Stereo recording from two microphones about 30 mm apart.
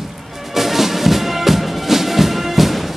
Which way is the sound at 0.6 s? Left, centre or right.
Centre.